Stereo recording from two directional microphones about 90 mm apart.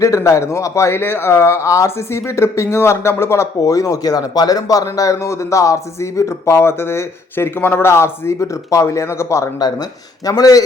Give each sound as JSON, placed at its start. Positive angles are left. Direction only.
{"t": 0.0, "sound": "speech", "side_deg": 35}
{"t": 9.6, "sound": "speech", "side_deg": 50}